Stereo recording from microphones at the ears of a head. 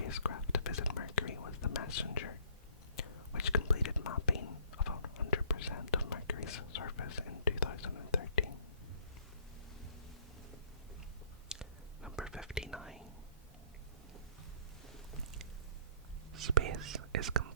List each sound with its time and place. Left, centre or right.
0.0 s whispering: left
11.4 s whispering: centre
16.4 s whispering: right